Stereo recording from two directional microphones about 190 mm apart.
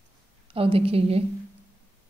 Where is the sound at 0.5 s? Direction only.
30° right (ahead or behind).